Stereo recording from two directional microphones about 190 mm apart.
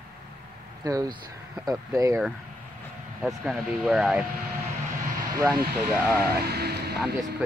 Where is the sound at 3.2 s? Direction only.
5° right (ahead or behind).